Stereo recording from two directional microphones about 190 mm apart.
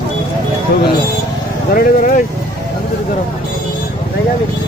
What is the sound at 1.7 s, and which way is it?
Speech, 45° left (ahead or behind).